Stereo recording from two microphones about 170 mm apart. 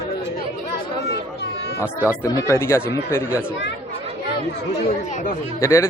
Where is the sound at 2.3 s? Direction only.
20° left (ahead or behind).